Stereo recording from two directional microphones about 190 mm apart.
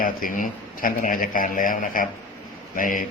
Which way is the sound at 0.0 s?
45° left (ahead or behind).